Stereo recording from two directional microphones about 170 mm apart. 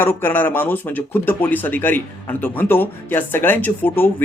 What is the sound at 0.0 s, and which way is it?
Speech, 15° left (ahead or behind).